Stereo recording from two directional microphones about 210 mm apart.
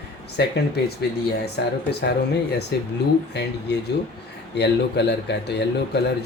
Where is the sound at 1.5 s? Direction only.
50° left (ahead or behind).